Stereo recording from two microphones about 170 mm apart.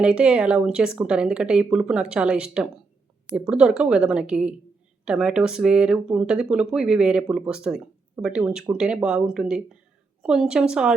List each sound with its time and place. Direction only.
0.0 s speech: 5° right (ahead or behind)